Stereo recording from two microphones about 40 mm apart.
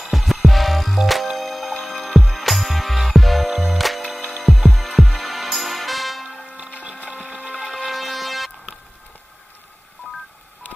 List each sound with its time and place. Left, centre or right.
0.0 s music: centre
6.4 s music: right
7.9 s music: centre
10.0 s telephone dialing: left